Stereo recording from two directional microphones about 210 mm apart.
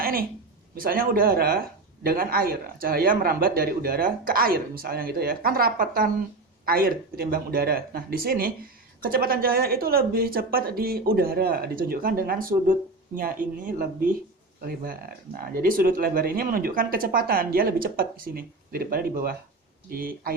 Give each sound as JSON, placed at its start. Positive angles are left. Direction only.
{"t": 0.0, "sound": "a sound", "side_deg": -45}
{"t": 0.8, "sound": "speech", "side_deg": -45}
{"t": 15.4, "sound": "speech", "side_deg": -40}